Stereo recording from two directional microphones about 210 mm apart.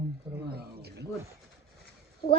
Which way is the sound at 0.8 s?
50° right (ahead or behind).